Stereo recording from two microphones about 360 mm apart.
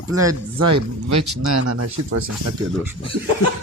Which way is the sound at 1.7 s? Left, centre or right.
Right.